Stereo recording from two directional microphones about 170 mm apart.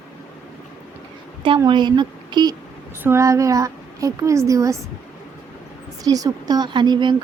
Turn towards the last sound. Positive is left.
turn(degrees=-25)  # may be behind; listen again after turning